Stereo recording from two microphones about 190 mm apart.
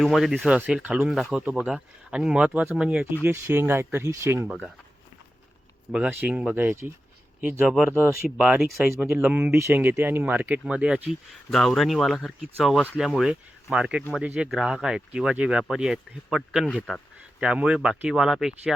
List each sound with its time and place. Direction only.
0.0 s speech: centre (ahead or behind)
5.9 s speech: 10° right (ahead or behind)